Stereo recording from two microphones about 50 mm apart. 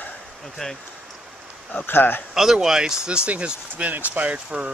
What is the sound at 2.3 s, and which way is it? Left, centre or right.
Speech, centre.